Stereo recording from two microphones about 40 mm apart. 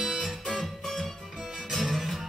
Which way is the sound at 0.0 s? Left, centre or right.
Centre.